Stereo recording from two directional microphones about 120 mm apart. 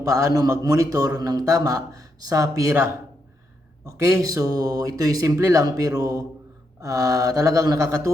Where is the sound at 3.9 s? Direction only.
25° right (ahead or behind).